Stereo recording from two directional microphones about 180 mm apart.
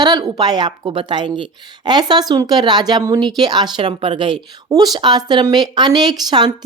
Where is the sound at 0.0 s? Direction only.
20° right (ahead or behind).